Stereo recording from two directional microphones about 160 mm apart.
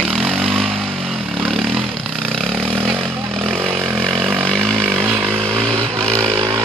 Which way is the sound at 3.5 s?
15° right (ahead or behind).